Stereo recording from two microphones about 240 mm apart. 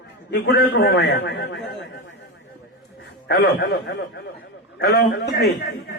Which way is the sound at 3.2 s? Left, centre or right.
Left.